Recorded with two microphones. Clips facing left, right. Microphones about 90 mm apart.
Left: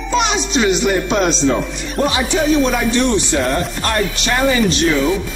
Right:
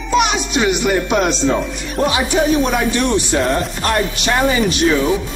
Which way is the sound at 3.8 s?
15° right (ahead or behind).